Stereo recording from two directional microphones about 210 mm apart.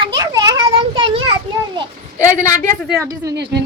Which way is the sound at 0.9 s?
25° right (ahead or behind).